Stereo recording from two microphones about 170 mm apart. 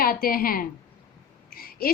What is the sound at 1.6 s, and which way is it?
Owl, 60° left (ahead or behind).